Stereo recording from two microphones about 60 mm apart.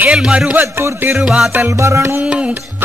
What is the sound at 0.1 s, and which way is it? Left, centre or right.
Speech, centre.